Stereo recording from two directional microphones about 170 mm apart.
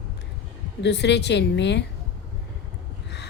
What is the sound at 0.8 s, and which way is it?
A woman's voice, 85° left.